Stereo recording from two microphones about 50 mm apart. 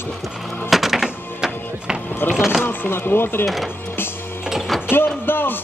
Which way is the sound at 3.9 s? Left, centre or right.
Left.